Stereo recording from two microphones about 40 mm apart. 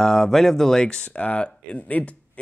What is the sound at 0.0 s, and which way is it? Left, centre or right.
Speech, centre.